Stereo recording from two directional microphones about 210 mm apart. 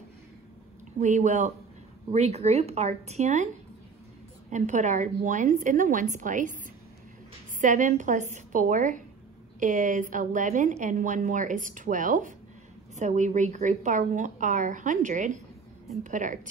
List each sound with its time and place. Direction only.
0.9 s a woman's voice: 35° right (ahead or behind)
4.5 s a woman's voice: 35° right (ahead or behind)
7.6 s a woman's voice: 35° right (ahead or behind)